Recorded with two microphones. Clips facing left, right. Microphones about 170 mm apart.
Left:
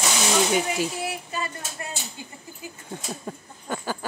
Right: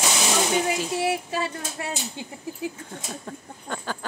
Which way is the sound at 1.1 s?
90° right.